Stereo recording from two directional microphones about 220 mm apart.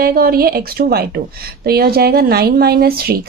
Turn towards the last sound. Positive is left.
turn(degrees=-45)  # may be behind; listen again after turning